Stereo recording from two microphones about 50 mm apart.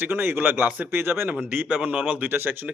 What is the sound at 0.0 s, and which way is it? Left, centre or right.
Speech, right.